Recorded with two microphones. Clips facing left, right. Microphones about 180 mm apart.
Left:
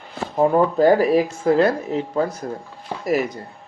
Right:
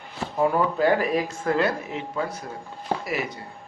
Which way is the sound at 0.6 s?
40° left (ahead or behind).